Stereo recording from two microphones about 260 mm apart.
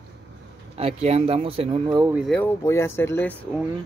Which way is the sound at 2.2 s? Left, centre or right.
Centre.